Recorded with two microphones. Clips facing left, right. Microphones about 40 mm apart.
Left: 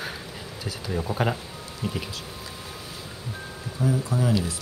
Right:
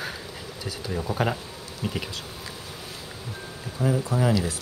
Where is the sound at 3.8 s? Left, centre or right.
Right.